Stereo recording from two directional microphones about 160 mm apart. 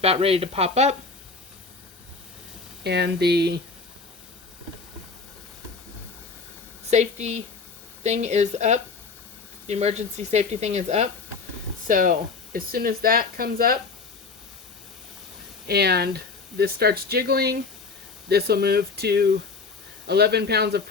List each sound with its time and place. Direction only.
0.0 s speech: 40° right (ahead or behind)
2.8 s speech: 90° right
6.9 s speech: 45° right (ahead or behind)
11.9 s speech: 60° right (ahead or behind)
15.6 s speech: 90° right